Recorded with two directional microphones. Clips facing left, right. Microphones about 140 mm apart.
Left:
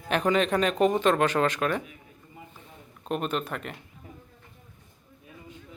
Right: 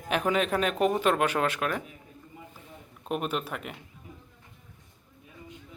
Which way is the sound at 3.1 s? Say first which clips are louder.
Left 1 dB; 5° right (ahead or behind).